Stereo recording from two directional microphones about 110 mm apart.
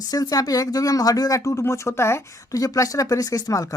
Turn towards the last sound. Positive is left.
turn(degrees=30)  # may be behind; listen again after turning